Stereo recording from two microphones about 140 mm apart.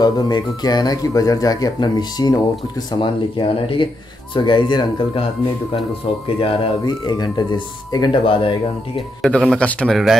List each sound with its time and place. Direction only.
0.0 s speech: 30° left (ahead or behind)
9.2 s a man's voice: centre (ahead or behind)